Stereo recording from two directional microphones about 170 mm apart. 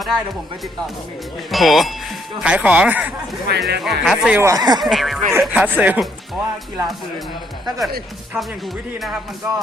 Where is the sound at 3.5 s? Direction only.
75° right (ahead or behind).